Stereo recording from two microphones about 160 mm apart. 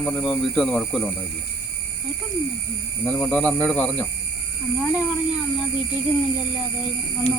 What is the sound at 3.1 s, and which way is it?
Speech, 10° left (ahead or behind).